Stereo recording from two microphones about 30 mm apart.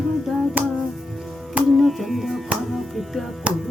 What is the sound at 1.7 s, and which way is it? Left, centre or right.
Music, centre.